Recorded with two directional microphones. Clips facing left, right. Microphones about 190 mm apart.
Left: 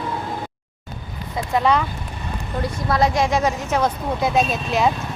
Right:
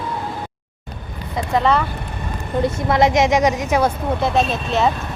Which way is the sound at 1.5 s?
Centre (ahead or behind).